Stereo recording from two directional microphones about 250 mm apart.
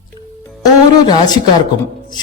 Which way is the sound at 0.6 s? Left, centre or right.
Centre.